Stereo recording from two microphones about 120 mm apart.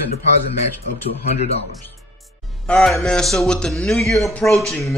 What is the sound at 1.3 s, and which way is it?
Speech, 60° left (ahead or behind).